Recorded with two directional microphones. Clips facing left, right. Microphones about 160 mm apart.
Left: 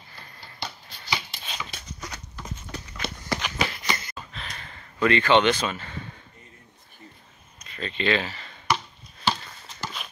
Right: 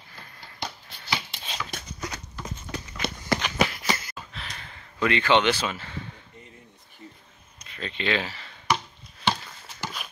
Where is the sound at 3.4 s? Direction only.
5° right (ahead or behind).